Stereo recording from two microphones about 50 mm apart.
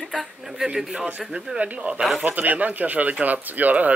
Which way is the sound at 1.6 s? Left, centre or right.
Right.